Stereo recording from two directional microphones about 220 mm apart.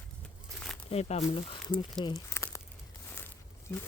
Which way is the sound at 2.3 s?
10° left (ahead or behind).